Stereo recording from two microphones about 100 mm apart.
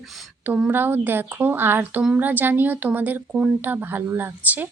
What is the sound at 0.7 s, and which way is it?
Female singing, 20° right (ahead or behind).